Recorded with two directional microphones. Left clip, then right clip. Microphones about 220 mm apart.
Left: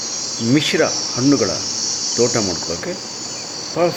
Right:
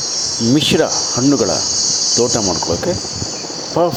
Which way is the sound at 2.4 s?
15° left (ahead or behind).